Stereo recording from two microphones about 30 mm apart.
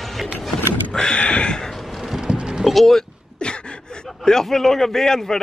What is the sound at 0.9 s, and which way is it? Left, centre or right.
Speech, centre.